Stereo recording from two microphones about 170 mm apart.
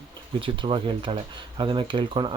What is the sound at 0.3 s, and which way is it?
Speech, 30° right (ahead or behind).